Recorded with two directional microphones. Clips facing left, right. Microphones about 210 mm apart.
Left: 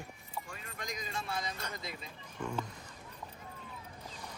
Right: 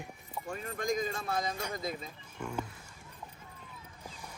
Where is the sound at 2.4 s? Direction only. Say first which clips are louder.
Even; 10° right (ahead or behind).